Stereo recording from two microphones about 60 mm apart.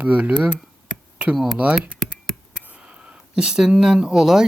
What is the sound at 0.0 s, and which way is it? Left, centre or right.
Speech, right.